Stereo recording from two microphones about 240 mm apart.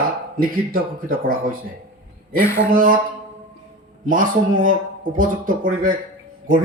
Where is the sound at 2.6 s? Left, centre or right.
Right.